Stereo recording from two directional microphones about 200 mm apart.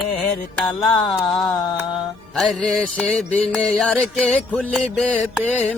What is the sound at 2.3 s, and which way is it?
Music, centre (ahead or behind).